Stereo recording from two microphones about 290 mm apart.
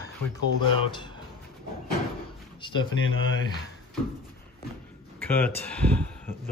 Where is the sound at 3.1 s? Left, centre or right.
Left.